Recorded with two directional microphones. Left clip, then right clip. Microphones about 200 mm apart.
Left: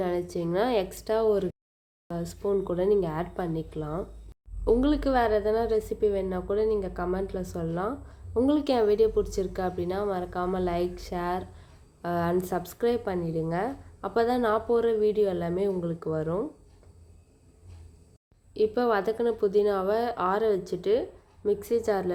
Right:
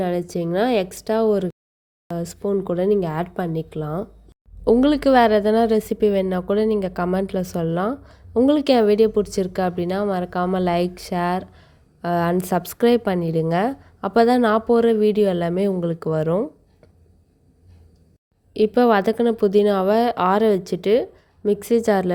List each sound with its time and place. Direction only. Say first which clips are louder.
0.0 s a woman's voice: right 6 dB; 30° right (ahead or behind)
18.5 s a woman's voice: right 8 dB; 40° right (ahead or behind)